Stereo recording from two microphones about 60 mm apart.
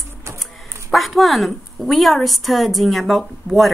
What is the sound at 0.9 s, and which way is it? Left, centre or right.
Speech, centre.